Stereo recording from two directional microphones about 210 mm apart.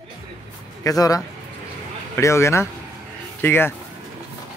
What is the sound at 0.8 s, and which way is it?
A man's voice, 15° left (ahead or behind).